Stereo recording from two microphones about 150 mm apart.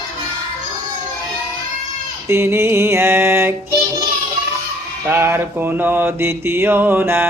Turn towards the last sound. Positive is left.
turn(degrees=-15)  # may be behind; listen again after turning